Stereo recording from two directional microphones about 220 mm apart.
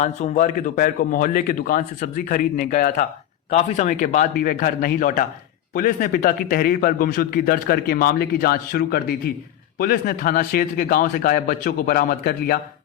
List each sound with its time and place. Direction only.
0.0 s a man's voice: 35° left (ahead or behind)